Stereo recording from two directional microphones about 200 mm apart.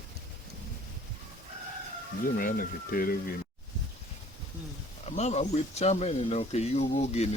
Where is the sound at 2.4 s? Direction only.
45° left (ahead or behind).